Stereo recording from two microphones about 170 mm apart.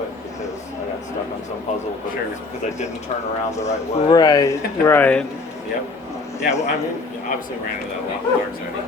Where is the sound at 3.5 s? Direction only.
15° left (ahead or behind).